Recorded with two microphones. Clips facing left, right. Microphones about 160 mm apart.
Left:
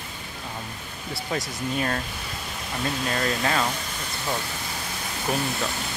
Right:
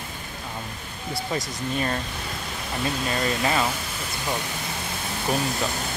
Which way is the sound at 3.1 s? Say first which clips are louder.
Right 1 dB; 5° right (ahead or behind).